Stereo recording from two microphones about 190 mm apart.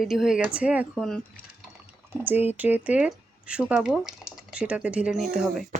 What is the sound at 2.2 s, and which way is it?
Speech, 10° right (ahead or behind).